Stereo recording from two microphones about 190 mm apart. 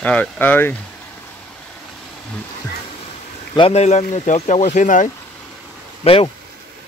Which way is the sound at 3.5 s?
30° left (ahead or behind).